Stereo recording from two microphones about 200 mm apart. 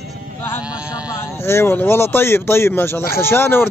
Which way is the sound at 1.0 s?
15° left (ahead or behind).